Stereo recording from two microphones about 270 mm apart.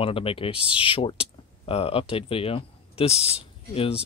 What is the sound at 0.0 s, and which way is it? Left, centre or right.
Speech, left.